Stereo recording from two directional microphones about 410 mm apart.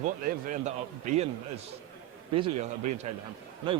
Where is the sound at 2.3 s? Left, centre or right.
Centre.